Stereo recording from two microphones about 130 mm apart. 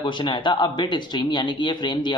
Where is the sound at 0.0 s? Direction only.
40° left (ahead or behind).